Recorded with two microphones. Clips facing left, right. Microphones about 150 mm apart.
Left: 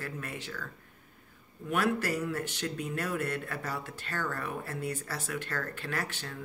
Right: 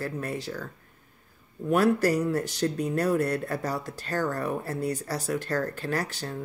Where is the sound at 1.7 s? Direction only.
40° right (ahead or behind).